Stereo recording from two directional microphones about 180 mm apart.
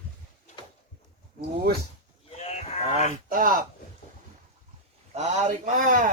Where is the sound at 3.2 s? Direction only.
50° right (ahead or behind).